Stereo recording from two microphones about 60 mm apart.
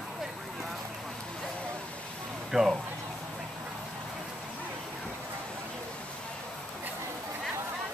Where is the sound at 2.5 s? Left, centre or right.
Centre.